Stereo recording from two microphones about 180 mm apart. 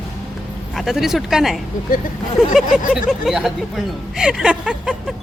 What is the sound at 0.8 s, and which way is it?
Speech, centre (ahead or behind).